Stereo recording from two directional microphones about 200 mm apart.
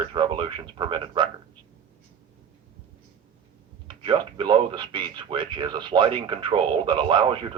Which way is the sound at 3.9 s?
25° right (ahead or behind).